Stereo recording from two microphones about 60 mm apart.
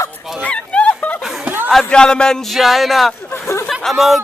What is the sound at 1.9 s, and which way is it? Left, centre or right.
Speech, centre.